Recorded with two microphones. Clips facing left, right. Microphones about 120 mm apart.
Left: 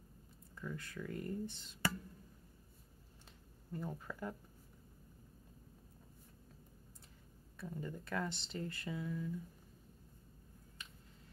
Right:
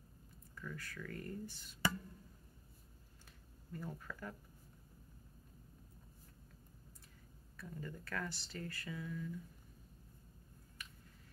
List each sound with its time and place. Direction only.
0.6 s speech: 25° left (ahead or behind)
3.7 s speech: 20° left (ahead or behind)
7.5 s speech: 20° left (ahead or behind)
10.8 s a sound: 25° left (ahead or behind)